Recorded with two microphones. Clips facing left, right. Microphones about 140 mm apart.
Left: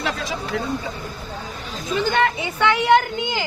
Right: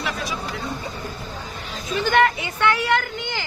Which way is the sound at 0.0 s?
90° left.